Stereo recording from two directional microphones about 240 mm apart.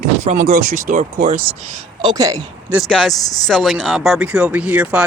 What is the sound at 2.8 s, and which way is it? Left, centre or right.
Speech, centre.